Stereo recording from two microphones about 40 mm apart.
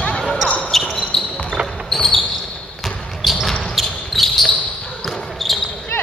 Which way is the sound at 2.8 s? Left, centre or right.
Centre.